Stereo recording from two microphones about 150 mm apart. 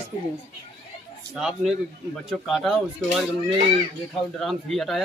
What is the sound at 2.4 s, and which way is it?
Speech, centre (ahead or behind).